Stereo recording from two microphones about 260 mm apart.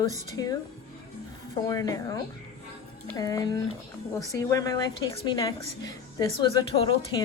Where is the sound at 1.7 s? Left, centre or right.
Centre.